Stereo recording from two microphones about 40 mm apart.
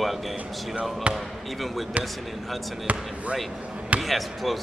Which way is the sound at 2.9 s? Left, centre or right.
Right.